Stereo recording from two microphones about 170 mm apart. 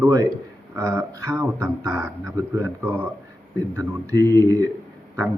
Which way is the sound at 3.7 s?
20° right (ahead or behind).